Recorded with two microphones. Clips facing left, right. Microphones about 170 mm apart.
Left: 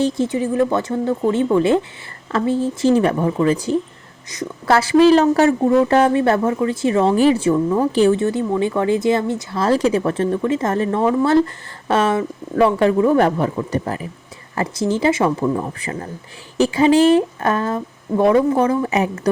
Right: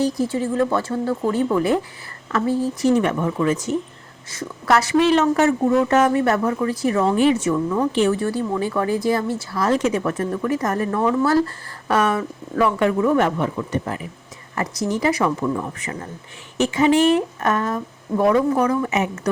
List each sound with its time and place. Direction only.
0.0 s a woman's voice: 25° left (ahead or behind)
4.3 s a woman's voice: 15° left (ahead or behind)
4.7 s a woman's voice: 30° left (ahead or behind)